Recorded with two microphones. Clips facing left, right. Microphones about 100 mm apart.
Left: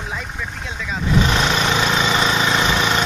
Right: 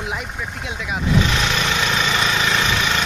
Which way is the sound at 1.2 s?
35° left (ahead or behind).